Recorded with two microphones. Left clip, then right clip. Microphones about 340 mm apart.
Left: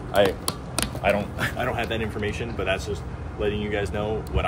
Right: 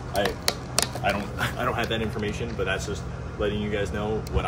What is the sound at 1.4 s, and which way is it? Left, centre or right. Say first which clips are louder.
Speech: right 3 dB; centre.